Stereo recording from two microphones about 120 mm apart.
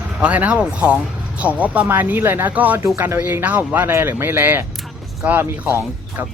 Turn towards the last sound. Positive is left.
turn(degrees=-15)  # may be behind; listen again after turning